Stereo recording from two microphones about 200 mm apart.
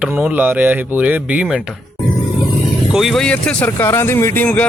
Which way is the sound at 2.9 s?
Centre (ahead or behind).